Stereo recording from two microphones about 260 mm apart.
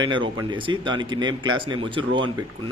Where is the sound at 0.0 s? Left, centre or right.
Centre.